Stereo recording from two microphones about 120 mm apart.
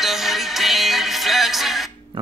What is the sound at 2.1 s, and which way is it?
Hammer, 40° right (ahead or behind).